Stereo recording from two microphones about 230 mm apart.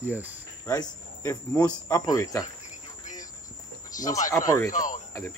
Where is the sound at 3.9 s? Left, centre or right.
Left.